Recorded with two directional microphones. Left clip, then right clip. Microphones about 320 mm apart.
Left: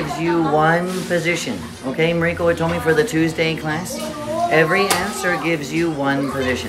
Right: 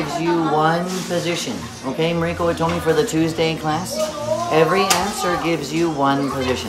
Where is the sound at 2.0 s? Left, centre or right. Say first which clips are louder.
Left 2 dB; centre.